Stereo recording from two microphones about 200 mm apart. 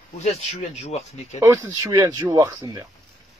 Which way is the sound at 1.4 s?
15° right (ahead or behind).